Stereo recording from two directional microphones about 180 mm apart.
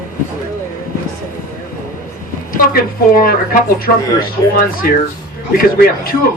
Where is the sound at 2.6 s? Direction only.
55° left (ahead or behind).